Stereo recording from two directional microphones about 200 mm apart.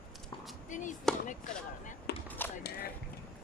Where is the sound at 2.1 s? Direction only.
55° left (ahead or behind).